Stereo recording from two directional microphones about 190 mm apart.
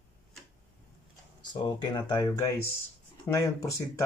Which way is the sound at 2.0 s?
20° left (ahead or behind).